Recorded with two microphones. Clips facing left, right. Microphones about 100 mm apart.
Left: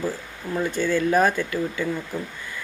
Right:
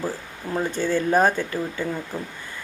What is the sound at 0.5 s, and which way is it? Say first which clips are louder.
Speech: even; 30° right (ahead or behind).